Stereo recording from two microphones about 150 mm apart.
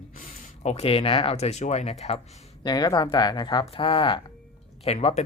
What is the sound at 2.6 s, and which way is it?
Speech, 25° left (ahead or behind).